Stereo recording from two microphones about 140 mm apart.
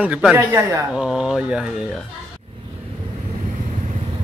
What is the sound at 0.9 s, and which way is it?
Speech, 5° right (ahead or behind).